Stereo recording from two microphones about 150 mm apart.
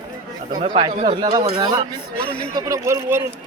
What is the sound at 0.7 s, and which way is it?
Speech, 35° right (ahead or behind).